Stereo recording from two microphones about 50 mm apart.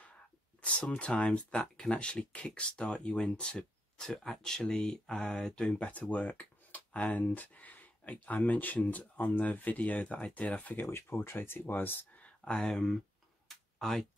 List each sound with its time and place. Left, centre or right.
0.6 s speech: left
4.7 s mantra: centre
5.8 s speech: left
10.9 s speech: left
12.2 s speech: centre
13.5 s a sound: centre